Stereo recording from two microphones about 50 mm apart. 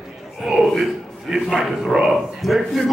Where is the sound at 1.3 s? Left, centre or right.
Centre.